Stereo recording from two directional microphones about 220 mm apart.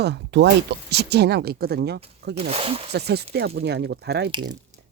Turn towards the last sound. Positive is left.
turn(degrees=-20)  # may be behind; listen again after turning